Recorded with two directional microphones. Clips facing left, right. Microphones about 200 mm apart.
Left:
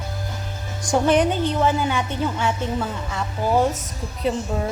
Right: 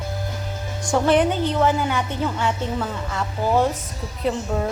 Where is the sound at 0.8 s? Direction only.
15° left (ahead or behind).